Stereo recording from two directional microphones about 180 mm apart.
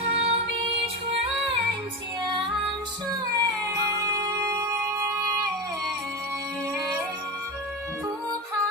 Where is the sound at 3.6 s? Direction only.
20° right (ahead or behind).